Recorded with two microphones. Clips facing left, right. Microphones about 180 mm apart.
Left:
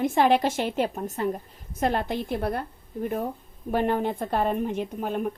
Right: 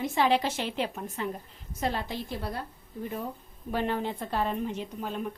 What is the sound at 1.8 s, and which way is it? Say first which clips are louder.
A woman's voice: left 6 dB; 55° left (ahead or behind).